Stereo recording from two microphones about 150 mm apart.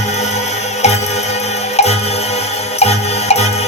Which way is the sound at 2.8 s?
45° left (ahead or behind).